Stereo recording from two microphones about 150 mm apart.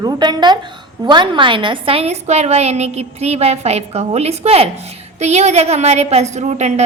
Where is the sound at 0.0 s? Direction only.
30° right (ahead or behind).